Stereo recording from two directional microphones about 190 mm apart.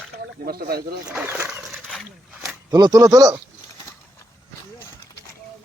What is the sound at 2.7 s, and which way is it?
Speech, 20° right (ahead or behind).